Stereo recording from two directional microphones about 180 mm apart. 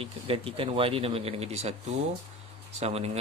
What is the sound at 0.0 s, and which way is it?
Speech, 30° right (ahead or behind).